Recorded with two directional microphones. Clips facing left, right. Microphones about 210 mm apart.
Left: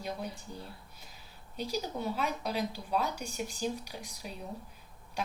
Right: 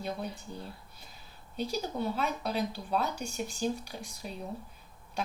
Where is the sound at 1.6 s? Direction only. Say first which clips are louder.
Right 2 dB; 10° left (ahead or behind).